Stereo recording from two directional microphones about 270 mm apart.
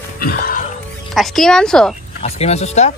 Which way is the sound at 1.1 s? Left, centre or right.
Centre.